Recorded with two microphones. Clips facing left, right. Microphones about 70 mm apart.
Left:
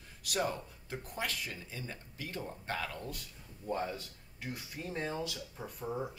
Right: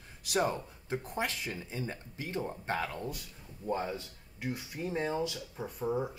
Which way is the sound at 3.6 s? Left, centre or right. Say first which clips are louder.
Right 2 dB; centre.